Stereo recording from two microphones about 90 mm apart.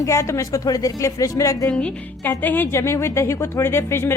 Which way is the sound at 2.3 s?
20° left (ahead or behind).